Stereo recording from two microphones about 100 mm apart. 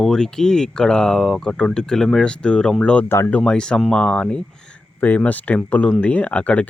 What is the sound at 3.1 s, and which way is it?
Speech, 25° left (ahead or behind).